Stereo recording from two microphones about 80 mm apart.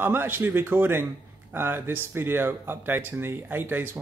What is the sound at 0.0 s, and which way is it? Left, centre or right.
Speech, right.